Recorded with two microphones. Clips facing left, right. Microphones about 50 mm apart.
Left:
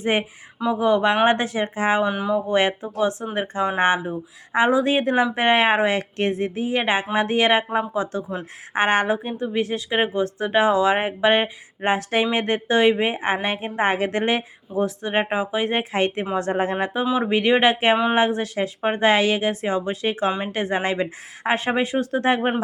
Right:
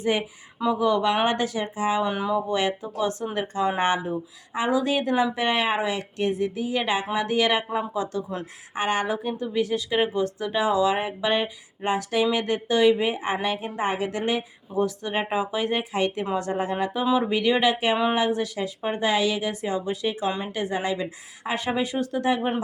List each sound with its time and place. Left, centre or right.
0.0 s speech: left
2.0 s speech: centre
2.5 s speech: left
3.0 s speech: left
8.7 s speech: left
9.1 s speech: left
14.8 s speech: left
15.7 s speech: left
17.0 s speech: left